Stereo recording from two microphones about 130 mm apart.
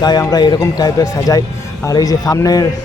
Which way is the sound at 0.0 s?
30° left (ahead or behind).